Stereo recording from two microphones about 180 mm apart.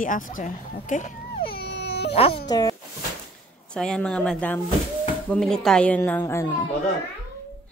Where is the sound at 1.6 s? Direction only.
70° left (ahead or behind).